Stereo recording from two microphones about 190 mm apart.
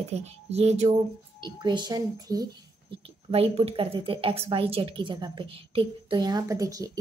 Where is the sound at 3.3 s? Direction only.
30° right (ahead or behind).